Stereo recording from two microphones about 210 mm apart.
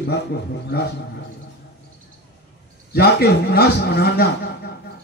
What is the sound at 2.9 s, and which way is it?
A man's voice, 50° left (ahead or behind).